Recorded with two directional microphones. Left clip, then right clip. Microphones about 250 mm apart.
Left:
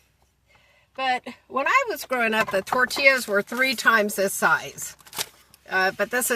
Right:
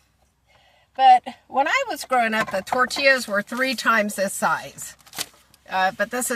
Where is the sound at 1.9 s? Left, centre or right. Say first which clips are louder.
Right 3 dB; centre.